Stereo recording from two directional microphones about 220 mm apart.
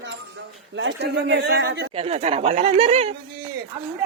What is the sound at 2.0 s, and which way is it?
A woman's voice, 30° right (ahead or behind).